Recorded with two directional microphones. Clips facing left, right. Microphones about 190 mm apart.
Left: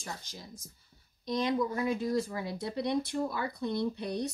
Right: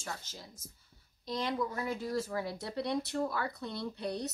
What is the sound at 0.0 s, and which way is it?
A woman's voice, 15° left (ahead or behind).